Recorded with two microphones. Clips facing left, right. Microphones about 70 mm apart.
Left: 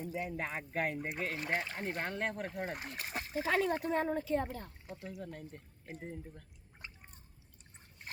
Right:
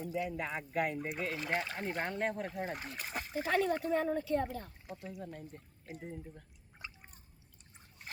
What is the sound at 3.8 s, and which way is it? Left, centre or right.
Speech, left.